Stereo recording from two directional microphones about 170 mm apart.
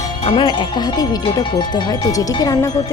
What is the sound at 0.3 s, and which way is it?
Speech, 30° left (ahead or behind).